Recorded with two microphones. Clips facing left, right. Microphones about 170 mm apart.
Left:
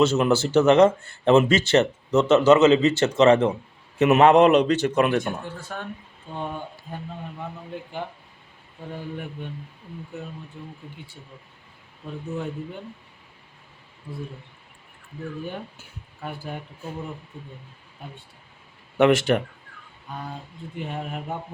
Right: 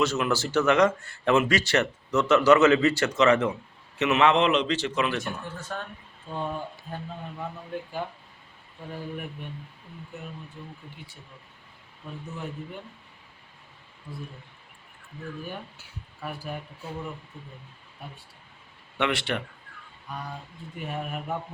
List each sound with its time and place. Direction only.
0.0 s speech: 25° left (ahead or behind)
3.9 s a man's voice: 50° left (ahead or behind)
4.5 s speech: 60° left (ahead or behind)
5.5 s speech: 10° left (ahead or behind)
18.9 s speech: 45° left (ahead or behind)